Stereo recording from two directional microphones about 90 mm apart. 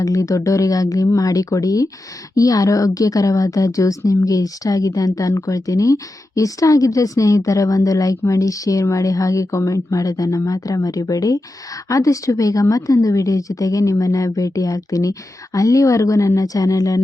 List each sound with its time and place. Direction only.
0.0 s a woman's voice: 40° left (ahead or behind)